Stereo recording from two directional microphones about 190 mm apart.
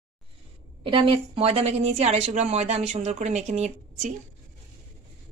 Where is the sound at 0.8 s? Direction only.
25° right (ahead or behind).